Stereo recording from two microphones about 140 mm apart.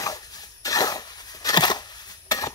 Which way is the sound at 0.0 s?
25° left (ahead or behind).